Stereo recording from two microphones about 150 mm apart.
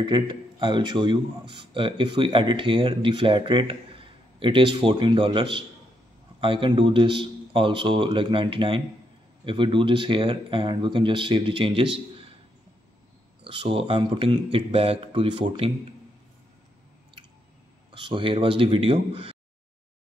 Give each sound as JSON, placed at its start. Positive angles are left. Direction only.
{"t": 0.0, "sound": "speech", "side_deg": -30}
{"t": 13.4, "sound": "speech", "side_deg": -35}
{"t": 18.0, "sound": "speech", "side_deg": -35}